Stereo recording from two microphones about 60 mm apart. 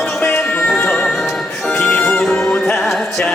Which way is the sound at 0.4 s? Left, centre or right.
Left.